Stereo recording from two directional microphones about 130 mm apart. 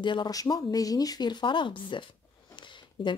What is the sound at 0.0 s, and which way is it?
A woman's voice, 35° left (ahead or behind).